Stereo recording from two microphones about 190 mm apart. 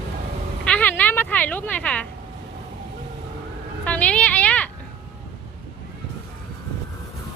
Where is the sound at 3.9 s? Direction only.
5° left (ahead or behind).